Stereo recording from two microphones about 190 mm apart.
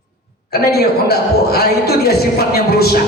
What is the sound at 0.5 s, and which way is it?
A man's voice, 55° left (ahead or behind).